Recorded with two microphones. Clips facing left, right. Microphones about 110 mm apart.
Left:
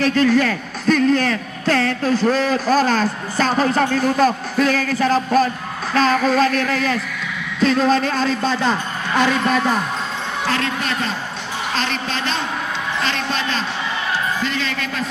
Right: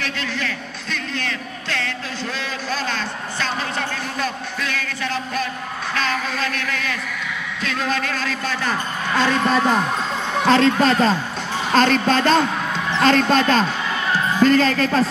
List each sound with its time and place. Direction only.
0.0 s a man's voice: 45° left (ahead or behind)
5.9 s music: 35° left (ahead or behind)
7.6 s speech: 35° left (ahead or behind); by 9.4 s 15° left (ahead or behind)
9.4 s speech: 5° left (ahead or behind)
10.4 s a woman's voice: 30° right (ahead or behind)